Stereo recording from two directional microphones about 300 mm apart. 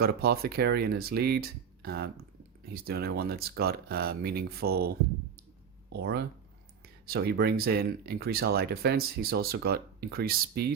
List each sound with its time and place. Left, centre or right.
0.0 s speech: right